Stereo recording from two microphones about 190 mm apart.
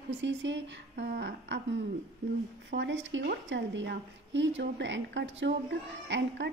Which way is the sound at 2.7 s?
70° right (ahead or behind).